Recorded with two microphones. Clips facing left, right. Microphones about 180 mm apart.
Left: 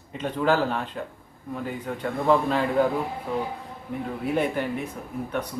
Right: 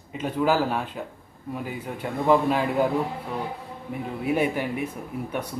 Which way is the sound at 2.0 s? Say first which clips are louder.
Right 1 dB; 10° right (ahead or behind).